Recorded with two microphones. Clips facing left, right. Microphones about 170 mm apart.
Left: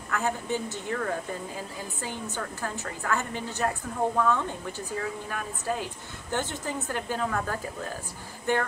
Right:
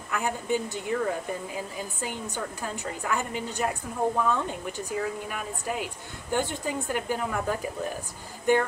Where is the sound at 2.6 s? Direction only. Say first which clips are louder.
Left 1 dB; 15° right (ahead or behind).